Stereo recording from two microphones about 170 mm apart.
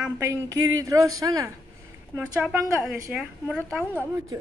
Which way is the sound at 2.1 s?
10° right (ahead or behind).